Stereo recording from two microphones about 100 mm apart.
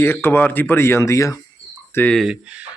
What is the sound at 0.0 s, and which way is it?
Speech, 25° left (ahead or behind).